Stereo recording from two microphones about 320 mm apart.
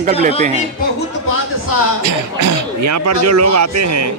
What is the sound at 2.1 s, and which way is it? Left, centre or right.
Speech, right.